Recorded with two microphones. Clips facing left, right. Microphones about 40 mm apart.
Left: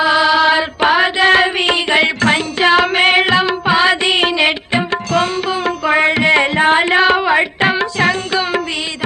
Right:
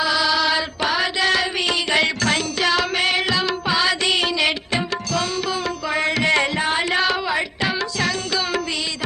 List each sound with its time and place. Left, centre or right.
0.0 s music: left